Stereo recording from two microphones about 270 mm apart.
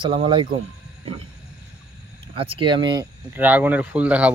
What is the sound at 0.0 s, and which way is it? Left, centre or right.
Speech, centre.